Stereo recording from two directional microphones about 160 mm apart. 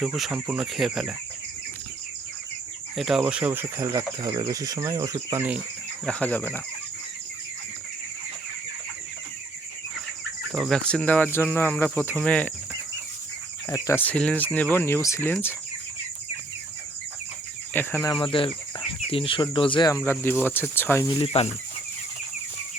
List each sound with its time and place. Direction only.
0.0 s speech: 5° right (ahead or behind)
2.9 s speech: centre (ahead or behind)
6.1 s speech: 10° left (ahead or behind)
10.5 s speech: centre (ahead or behind)
13.7 s speech: 20° left (ahead or behind)
17.7 s speech: 15° left (ahead or behind)
18.2 s speech: 35° left (ahead or behind)
20.0 s speech: 15° left (ahead or behind)
21.2 s speech: 40° left (ahead or behind)